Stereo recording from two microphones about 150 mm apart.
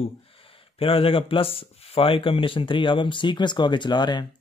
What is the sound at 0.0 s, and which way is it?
Speech, 40° left (ahead or behind).